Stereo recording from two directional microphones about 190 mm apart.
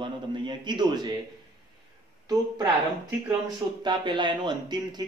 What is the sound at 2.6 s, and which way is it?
Speech, 10° right (ahead or behind).